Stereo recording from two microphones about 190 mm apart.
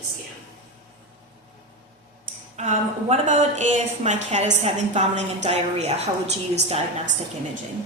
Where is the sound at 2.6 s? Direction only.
40° right (ahead or behind).